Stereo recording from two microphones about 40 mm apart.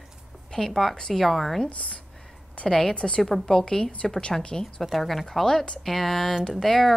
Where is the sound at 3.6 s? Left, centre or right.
Centre.